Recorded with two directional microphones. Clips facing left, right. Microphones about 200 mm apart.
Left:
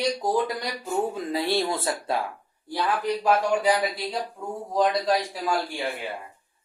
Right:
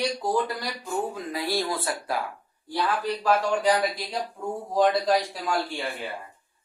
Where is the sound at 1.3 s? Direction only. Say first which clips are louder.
Left 2 dB; 25° left (ahead or behind).